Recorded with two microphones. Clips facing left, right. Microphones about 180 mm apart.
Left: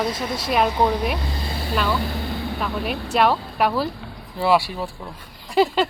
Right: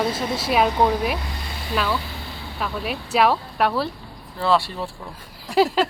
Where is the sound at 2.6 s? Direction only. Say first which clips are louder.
Right 2 dB; centre (ahead or behind).